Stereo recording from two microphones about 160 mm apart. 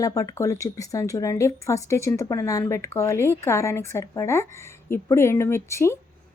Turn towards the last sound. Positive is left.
turn(degrees=15)  # may be behind; listen again after turning